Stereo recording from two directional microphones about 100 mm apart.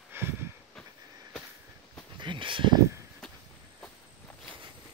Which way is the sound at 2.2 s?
55° right (ahead or behind).